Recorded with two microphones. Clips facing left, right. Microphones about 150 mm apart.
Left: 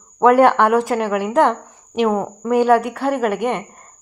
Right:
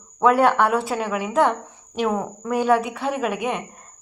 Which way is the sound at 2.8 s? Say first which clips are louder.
Left 5 dB; 80° left.